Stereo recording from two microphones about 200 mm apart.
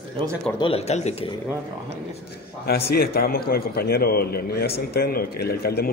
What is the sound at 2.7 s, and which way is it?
A man's voice, 50° left (ahead or behind).